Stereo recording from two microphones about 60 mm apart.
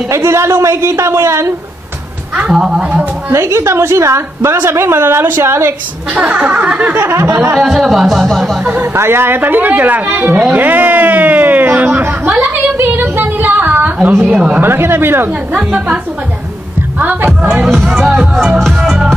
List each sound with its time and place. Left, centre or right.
0.1 s a woman's voice: right
2.4 s speech: centre
2.8 s snicker: right
3.3 s a woman's voice: right
6.1 s snicker: centre
7.0 s a woman's voice: right
7.6 s speech: centre
8.9 s speech: right
10.5 s a sound: right
14.2 s snicker: centre
14.6 s speech: right
17.0 s speech: right
17.9 s speech: centre